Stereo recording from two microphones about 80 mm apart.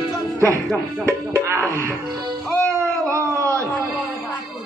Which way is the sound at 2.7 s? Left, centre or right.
Right.